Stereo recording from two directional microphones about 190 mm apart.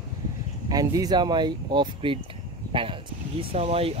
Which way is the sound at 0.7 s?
20° right (ahead or behind).